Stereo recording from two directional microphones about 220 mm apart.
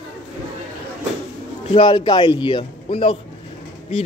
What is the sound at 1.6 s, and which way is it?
A man's voice, 25° left (ahead or behind).